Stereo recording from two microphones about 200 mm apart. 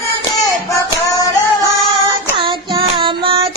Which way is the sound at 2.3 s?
25° right (ahead or behind).